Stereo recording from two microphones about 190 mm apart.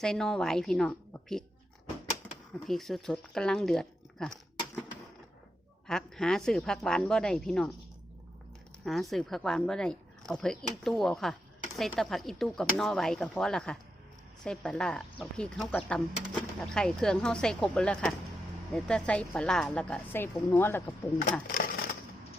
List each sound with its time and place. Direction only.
0.0 s a woman's voice: 5° left (ahead or behind)
2.6 s speech: centre (ahead or behind)
5.9 s a woman's voice: 5° left (ahead or behind)
8.8 s a woman's voice: centre (ahead or behind)
21.4 s a sound: 50° left (ahead or behind)